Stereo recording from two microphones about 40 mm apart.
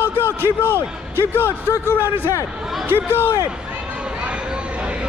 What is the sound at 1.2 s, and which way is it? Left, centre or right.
A man's voice, left.